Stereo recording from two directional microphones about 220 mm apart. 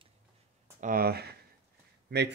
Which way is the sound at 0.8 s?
40° right (ahead or behind).